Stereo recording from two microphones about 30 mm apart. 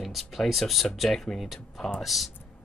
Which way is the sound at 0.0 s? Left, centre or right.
Centre.